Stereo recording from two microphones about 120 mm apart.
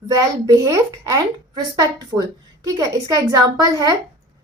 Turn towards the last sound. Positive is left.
turn(degrees=-30)  # may be behind; listen again after turning